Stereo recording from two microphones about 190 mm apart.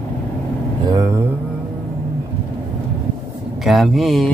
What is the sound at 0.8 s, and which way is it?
Vehicle, 20° right (ahead or behind).